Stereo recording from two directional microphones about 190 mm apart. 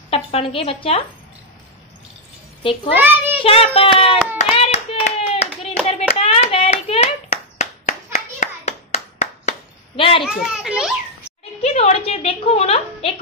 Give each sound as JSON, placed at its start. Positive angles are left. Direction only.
{"t": 0.1, "sound": "a woman's voice", "side_deg": 30}
{"t": 2.6, "sound": "a child's voice", "side_deg": 30}
{"t": 3.0, "sound": "a child's voice", "side_deg": -10}
{"t": 3.4, "sound": "a woman's voice", "side_deg": 30}
{"t": 4.6, "sound": "hands", "side_deg": 35}
{"t": 10.2, "sound": "a child's voice", "side_deg": -5}
{"t": 11.6, "sound": "a woman's voice", "side_deg": 35}